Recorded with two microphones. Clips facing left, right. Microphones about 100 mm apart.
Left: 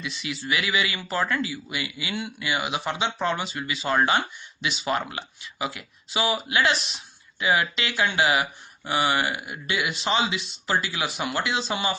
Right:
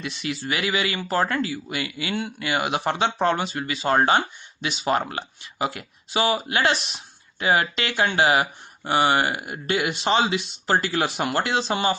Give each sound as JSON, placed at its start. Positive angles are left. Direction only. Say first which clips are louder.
{"t": 0.0, "sound": "speech", "louder": "right 3 dB", "side_deg": -45}